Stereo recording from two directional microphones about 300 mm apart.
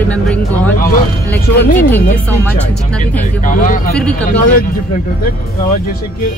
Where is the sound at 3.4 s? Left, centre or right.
Left.